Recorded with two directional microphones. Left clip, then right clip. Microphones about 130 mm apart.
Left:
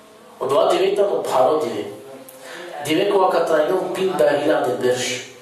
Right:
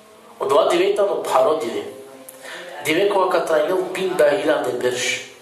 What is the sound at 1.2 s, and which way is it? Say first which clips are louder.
A man's voice: even; 15° right (ahead or behind).